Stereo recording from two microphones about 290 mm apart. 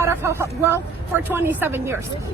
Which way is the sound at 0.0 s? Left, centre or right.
Centre.